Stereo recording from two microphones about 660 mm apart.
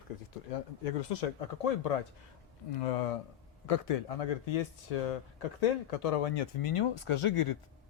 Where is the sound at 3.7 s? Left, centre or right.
Left.